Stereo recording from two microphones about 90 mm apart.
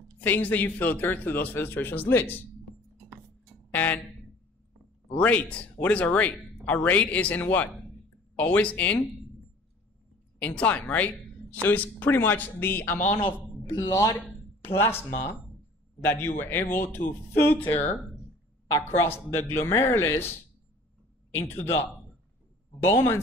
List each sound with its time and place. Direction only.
0.2 s speech: 20° left (ahead or behind)
3.7 s speech: 20° left (ahead or behind)
5.1 s speech: 15° left (ahead or behind)
10.4 s speech: 15° left (ahead or behind)
13.7 s a woman's voice: 40° left (ahead or behind)
14.6 s speech: 25° left (ahead or behind)
18.7 s a woman's voice: 30° left (ahead or behind)